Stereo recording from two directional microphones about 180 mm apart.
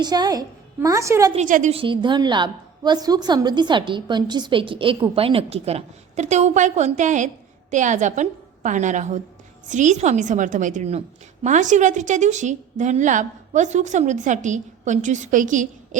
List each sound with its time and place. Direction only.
0.0 s a woman's voice: 20° right (ahead or behind)
1.3 s a woman's voice: 45° right (ahead or behind)
1.7 s a woman's voice: 30° right (ahead or behind); by 16.0 s 45° right (ahead or behind)